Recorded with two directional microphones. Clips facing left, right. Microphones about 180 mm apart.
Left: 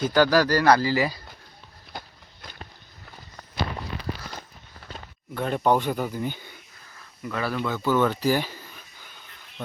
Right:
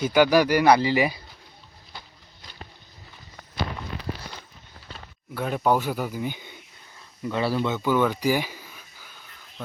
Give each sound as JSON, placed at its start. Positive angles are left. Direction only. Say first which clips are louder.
{"t": 0.0, "sound": "speech", "louder": "right 1 dB", "side_deg": -10}
{"t": 1.9, "sound": "a sound", "louder": "left 6 dB", "side_deg": 55}
{"t": 5.3, "sound": "speech", "louder": "left 1 dB", "side_deg": -5}
{"t": 7.3, "sound": "speech", "louder": "right 3 dB", "side_deg": -25}